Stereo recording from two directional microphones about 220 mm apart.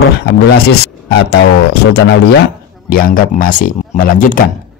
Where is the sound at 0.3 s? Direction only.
50° left (ahead or behind).